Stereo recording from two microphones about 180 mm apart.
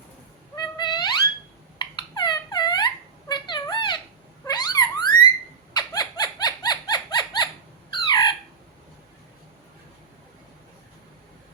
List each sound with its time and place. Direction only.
0.5 s music: 25° left (ahead or behind)
1.8 s squeak: 25° left (ahead or behind)
3.2 s cat: 25° left (ahead or behind)
4.4 s a sound: 20° left (ahead or behind)